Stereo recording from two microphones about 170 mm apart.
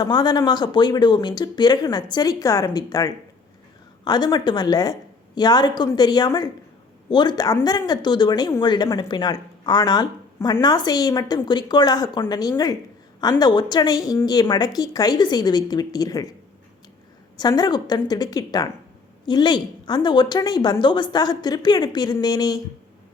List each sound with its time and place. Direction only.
0.0 s speech: 25° left (ahead or behind)
17.3 s speech: 25° left (ahead or behind)